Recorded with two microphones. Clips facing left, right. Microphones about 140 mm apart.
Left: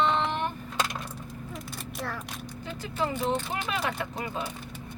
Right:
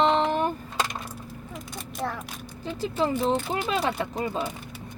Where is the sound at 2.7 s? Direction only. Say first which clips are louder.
Right 5 dB; 30° right (ahead or behind).